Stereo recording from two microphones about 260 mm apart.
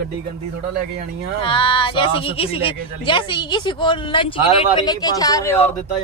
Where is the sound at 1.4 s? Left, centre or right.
Centre.